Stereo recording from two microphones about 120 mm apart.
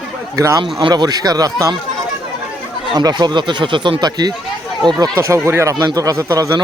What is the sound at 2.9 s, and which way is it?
Speech, 35° right (ahead or behind).